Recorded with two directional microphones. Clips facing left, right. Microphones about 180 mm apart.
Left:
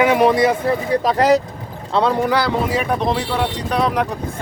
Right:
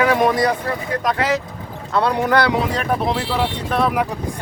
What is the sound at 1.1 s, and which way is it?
Speech, 40° left (ahead or behind).